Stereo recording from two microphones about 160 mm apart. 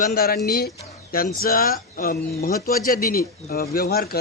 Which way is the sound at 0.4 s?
75° left (ahead or behind).